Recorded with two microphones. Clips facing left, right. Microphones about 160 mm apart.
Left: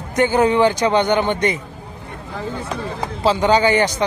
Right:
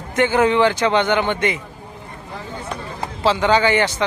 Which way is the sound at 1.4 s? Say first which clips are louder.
Left 2 dB; 40° left (ahead or behind).